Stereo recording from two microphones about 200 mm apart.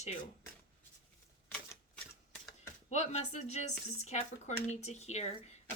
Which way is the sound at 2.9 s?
35° left (ahead or behind).